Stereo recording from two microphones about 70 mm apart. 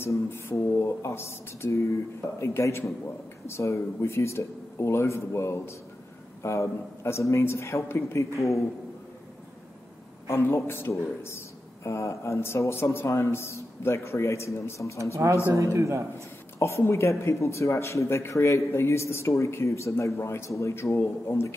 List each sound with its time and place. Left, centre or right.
0.0 s a man's voice: left
10.2 s a man's voice: left
15.2 s speech: right
16.5 s a man's voice: left